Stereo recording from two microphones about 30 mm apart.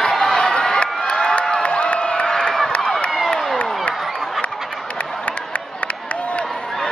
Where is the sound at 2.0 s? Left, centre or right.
Left.